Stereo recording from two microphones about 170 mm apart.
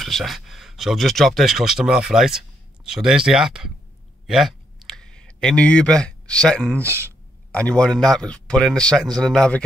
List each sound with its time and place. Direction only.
0.0 s speech: centre (ahead or behind)
4.3 s a sound: centre (ahead or behind)
6.9 s speech: 15° right (ahead or behind)
7.5 s speech: 5° left (ahead or behind)